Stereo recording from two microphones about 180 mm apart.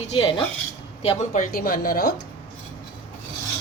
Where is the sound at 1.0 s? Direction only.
40° left (ahead or behind); by 2.0 s 55° left (ahead or behind).